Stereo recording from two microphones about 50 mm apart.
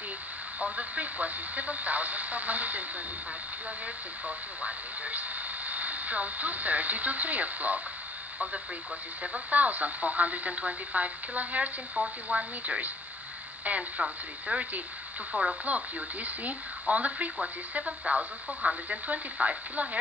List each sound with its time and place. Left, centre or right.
0.6 s speech: right
4.6 s speech: right
9.2 s speech: right